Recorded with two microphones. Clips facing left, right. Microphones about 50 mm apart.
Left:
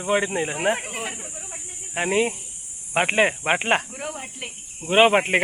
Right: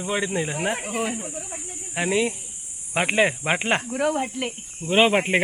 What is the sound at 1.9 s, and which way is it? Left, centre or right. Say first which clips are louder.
Speech: left 1 dB; centre.